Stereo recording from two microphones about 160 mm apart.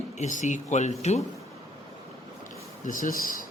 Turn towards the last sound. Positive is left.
turn(degrees=60)  # may be behind; listen again after turning